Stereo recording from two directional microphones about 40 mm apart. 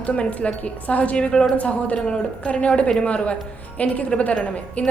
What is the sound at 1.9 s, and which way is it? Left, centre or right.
A woman's voice, left.